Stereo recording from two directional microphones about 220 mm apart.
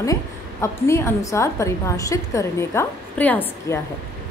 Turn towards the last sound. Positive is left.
turn(degrees=10)  # may be behind; listen again after turning